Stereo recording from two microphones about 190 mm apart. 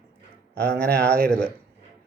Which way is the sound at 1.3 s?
5° left (ahead or behind).